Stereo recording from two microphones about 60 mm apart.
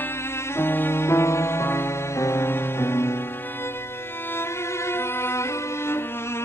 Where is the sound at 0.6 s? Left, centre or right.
Left.